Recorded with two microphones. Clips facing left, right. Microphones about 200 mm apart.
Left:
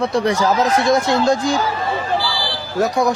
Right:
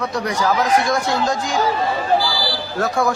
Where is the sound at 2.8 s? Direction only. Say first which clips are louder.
Left 3 dB; 20° left (ahead or behind).